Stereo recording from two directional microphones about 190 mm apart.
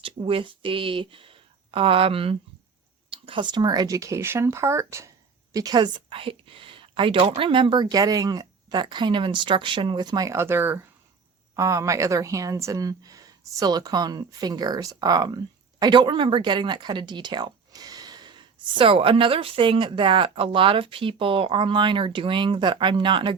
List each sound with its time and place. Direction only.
0.0 s speech: 30° right (ahead or behind)